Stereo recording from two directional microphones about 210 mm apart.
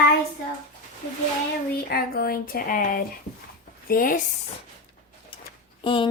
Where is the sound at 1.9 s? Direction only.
45° left (ahead or behind).